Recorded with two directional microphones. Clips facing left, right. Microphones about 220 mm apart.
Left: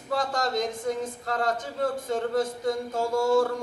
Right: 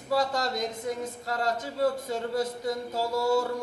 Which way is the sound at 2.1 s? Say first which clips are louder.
Left 3 dB; 50° left (ahead or behind).